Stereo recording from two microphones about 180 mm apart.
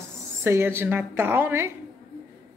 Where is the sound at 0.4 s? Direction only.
15° right (ahead or behind).